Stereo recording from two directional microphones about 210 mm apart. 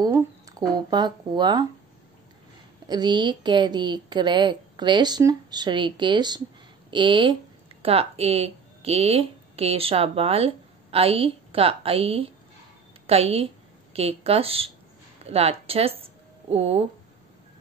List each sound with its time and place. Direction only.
0.0 s speech: 20° right (ahead or behind)
2.9 s a woman's voice: 20° right (ahead or behind)